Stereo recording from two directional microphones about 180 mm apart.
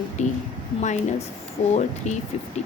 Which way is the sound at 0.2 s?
40° left (ahead or behind).